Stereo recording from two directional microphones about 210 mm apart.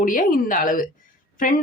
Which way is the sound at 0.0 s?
40° left (ahead or behind).